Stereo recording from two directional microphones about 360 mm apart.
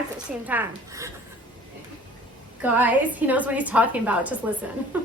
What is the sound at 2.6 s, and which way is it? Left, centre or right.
A woman's voice, centre.